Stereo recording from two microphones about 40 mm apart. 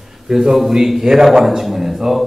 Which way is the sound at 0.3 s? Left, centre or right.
Centre.